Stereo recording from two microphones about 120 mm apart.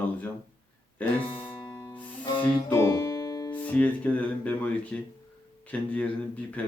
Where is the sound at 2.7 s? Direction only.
25° left (ahead or behind).